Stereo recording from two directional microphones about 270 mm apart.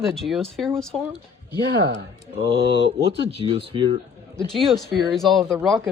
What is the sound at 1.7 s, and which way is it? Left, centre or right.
Speech, right.